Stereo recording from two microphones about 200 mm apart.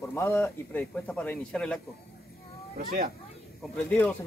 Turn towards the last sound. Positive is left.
turn(degrees=5)  # may be behind; listen again after turning